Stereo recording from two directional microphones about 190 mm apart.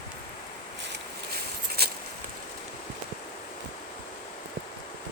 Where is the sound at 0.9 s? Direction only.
55° right (ahead or behind).